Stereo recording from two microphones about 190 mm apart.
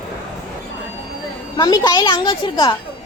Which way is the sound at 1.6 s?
20° left (ahead or behind).